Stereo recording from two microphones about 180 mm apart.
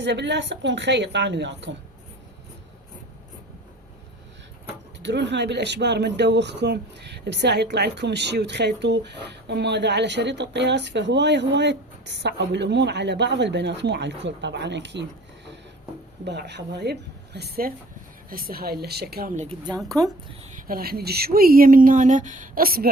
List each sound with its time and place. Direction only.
0.0 s speech: 75° right (ahead or behind)
4.9 s speech: 75° right (ahead or behind)
16.2 s speech: 70° right (ahead or behind)
20.4 s speech: 50° right (ahead or behind)